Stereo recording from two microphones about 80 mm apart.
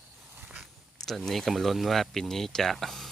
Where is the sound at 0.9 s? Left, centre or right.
Centre.